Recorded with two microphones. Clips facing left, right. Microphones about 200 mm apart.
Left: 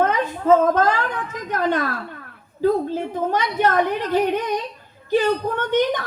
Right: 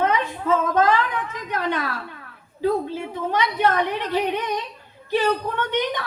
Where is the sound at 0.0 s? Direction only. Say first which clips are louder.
Left 2 dB; 50° left (ahead or behind).